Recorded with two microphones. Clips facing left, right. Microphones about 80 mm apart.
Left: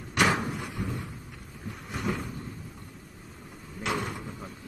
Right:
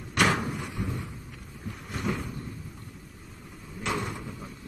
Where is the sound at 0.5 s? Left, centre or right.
Centre.